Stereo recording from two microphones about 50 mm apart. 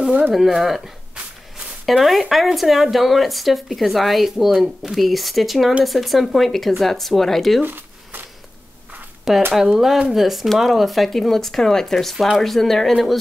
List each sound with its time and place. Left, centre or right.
0.3 s speech: centre
1.9 s speech: centre
7.6 s zipper: right
9.5 s speech: centre